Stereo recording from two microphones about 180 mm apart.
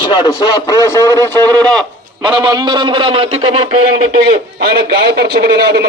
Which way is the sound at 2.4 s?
20° right (ahead or behind).